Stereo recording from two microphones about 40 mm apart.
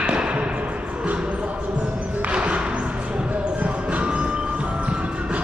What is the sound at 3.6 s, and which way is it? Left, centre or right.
Music, right.